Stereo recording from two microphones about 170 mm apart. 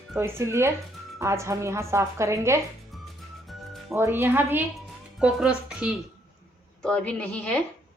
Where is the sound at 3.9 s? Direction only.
15° right (ahead or behind).